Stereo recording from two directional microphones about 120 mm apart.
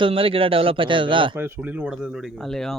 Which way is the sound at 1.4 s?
15° right (ahead or behind).